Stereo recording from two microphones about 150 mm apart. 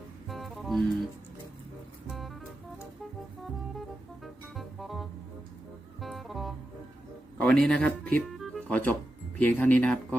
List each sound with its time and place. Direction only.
0.3 s music: centre (ahead or behind)
2.0 s music: centre (ahead or behind)
3.4 s music: centre (ahead or behind)
7.3 s speech: 5° left (ahead or behind)
8.3 s music: centre (ahead or behind)
9.4 s speech: 10° left (ahead or behind)